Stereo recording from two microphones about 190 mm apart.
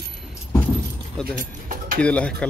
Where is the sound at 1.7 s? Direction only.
50° right (ahead or behind).